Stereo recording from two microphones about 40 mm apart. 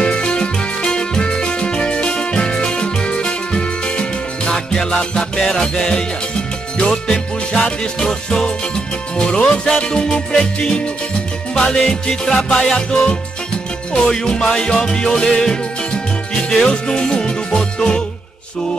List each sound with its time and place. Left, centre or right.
0.0 s music: left
11.9 s music: centre
13.9 s music: centre